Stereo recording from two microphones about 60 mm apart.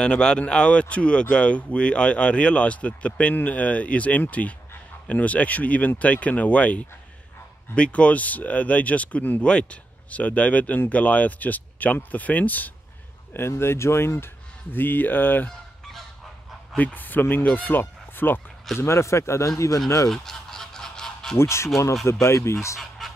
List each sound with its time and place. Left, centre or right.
0.0 s speech: centre
13.3 s speech: left
16.7 s speech: left
18.8 s speech: left
20.1 s honk: centre
21.4 s speech: left
22.8 s fowl: centre